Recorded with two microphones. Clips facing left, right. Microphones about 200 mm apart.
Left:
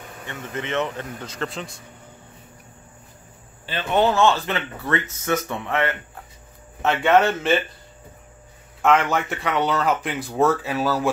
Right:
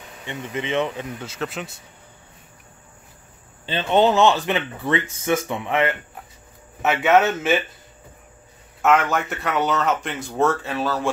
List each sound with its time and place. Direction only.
0.3 s speech: 15° right (ahead or behind)
3.6 s speech: 20° right (ahead or behind); by 7.6 s 5° right (ahead or behind)
9.1 s speech: centre (ahead or behind)